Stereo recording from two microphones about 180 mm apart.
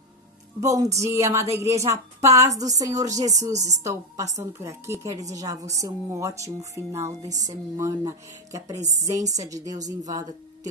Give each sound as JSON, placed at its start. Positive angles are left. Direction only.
{"t": 0.6, "sound": "a woman's voice", "side_deg": -20}